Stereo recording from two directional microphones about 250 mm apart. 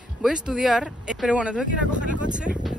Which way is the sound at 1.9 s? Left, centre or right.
Right.